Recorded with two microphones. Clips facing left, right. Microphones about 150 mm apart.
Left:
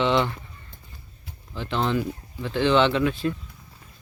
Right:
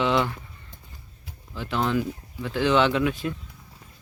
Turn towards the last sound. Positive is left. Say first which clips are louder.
# left 1 dB
turn(degrees=-10)  # may be behind; listen again after turning